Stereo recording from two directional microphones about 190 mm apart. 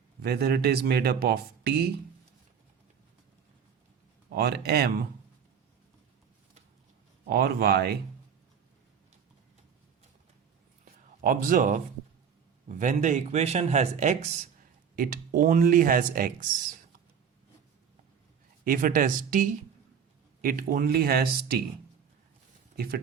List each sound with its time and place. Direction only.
0.2 s speech: 55° right (ahead or behind)
4.3 s speech: 55° right (ahead or behind)
7.3 s speech: 50° right (ahead or behind)
11.2 s speech: 45° right (ahead or behind)
14.9 s speech: 45° right (ahead or behind)
18.6 s speech: 45° right (ahead or behind)
22.7 s speech: 55° right (ahead or behind)